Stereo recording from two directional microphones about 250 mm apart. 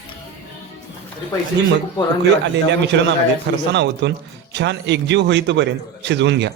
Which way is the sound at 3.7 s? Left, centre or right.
Right.